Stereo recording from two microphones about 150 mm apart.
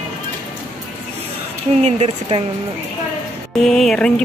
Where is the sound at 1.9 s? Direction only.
45° right (ahead or behind).